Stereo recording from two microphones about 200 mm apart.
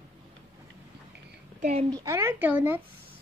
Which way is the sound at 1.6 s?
35° right (ahead or behind).